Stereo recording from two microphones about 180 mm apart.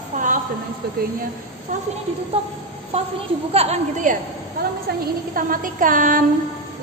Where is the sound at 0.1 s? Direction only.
40° right (ahead or behind).